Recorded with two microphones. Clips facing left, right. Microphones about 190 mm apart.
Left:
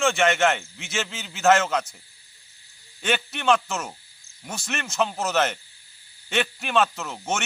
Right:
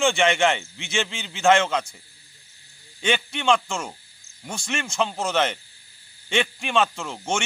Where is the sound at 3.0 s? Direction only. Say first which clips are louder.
Right 1 dB; 5° left (ahead or behind).